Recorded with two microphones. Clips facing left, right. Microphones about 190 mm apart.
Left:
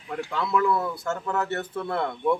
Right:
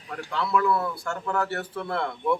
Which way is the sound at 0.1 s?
20° left (ahead or behind).